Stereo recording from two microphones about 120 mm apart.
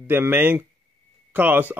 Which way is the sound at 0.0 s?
15° right (ahead or behind).